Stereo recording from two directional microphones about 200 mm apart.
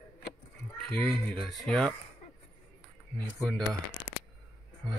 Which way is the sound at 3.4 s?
Centre (ahead or behind).